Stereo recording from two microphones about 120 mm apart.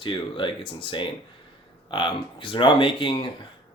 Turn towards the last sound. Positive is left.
turn(degrees=40)  # may be behind; listen again after turning